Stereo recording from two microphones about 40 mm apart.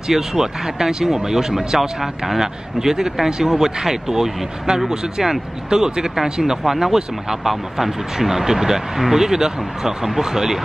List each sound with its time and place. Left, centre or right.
0.1 s speech: centre